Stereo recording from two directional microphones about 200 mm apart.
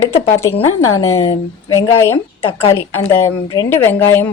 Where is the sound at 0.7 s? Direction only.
90° left.